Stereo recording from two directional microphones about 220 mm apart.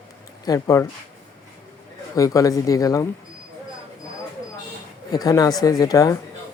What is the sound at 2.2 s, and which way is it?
Speech, 15° left (ahead or behind).